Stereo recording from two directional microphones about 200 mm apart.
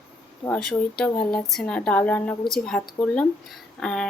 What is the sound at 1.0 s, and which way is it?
Speech, 5° left (ahead or behind).